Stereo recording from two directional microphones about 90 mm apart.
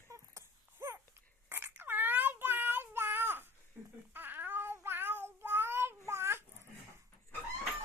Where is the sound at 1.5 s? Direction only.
25° right (ahead or behind).